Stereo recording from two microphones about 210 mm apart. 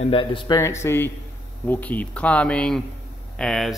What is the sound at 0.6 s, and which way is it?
Speech, 10° left (ahead or behind).